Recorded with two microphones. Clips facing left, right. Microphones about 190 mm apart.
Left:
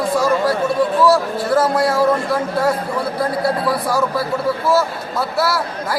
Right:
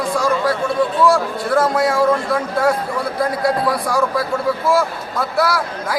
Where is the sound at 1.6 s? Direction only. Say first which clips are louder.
Right 1 dB; 5° left (ahead or behind).